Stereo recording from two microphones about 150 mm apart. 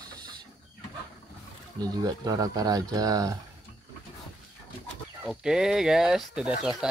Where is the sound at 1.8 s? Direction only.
25° right (ahead or behind).